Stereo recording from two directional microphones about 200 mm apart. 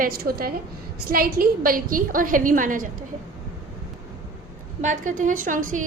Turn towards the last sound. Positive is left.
turn(degrees=-40)  # may be behind; listen again after turning